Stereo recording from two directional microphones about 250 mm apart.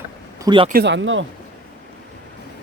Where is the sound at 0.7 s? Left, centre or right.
Right.